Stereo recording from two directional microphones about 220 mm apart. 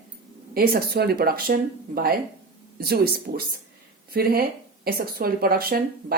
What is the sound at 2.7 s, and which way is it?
Speech, 45° right (ahead or behind).